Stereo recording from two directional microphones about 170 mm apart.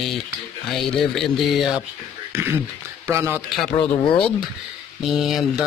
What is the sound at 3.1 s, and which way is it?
Speech, 15° right (ahead or behind).